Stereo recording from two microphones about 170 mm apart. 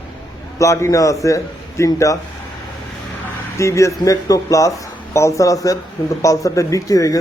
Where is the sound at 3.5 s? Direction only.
15° left (ahead or behind).